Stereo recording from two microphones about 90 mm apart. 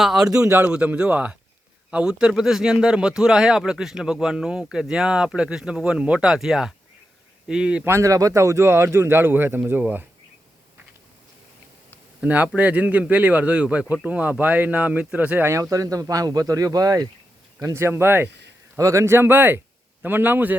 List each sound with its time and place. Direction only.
0.0 s speech: 5° right (ahead or behind)
0.6 s a man's voice: 15° right (ahead or behind)
7.9 s a man's voice: 35° right (ahead or behind)
12.2 s speech: 15° right (ahead or behind)
15.7 s speech: 40° right (ahead or behind)
17.7 s speech: 25° right (ahead or behind)
18.8 s a man's voice: 35° right (ahead or behind); by 20.6 s 20° right (ahead or behind)